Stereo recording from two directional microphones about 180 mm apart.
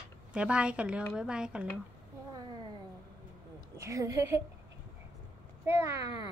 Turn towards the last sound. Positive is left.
turn(degrees=-15)  # may be behind; listen again after turning